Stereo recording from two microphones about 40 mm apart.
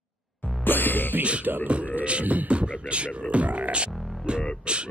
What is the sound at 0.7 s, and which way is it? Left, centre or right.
Music, left.